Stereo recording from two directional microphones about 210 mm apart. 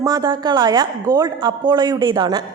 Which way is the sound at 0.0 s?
20° right (ahead or behind).